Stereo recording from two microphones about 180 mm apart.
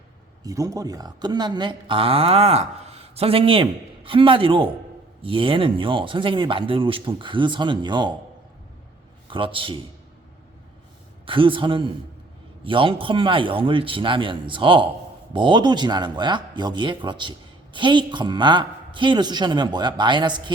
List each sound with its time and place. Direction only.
0.4 s speech: 20° right (ahead or behind)
9.2 s a man's voice: 30° right (ahead or behind)
11.3 s speech: 30° right (ahead or behind)